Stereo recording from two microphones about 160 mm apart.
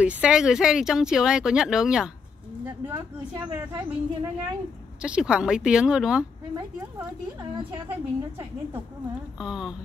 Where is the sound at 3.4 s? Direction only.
20° right (ahead or behind).